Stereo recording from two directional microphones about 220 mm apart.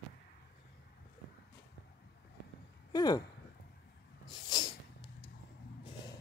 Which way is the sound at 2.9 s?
15° left (ahead or behind).